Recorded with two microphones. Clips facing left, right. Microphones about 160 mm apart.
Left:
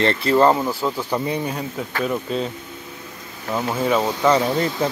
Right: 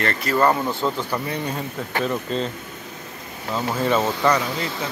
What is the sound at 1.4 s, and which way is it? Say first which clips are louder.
Speech: left 1 dB; 5° left (ahead or behind).